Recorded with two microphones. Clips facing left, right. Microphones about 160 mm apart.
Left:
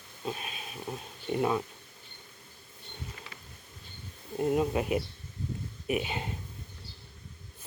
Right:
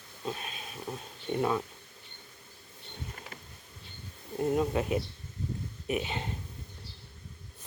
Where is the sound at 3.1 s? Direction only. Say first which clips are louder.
Right 2 dB; 50° right (ahead or behind).